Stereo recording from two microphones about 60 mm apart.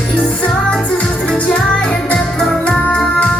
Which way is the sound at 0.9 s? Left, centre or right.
Centre.